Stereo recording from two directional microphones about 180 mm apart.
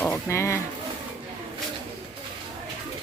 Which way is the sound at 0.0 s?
15° left (ahead or behind).